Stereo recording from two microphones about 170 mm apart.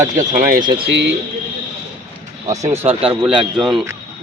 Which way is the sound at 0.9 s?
90° right.